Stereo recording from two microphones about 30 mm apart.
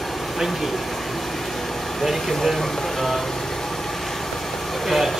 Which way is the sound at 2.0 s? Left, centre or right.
Centre.